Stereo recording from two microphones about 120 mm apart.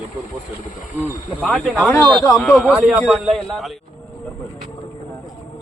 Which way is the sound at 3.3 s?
Centre (ahead or behind).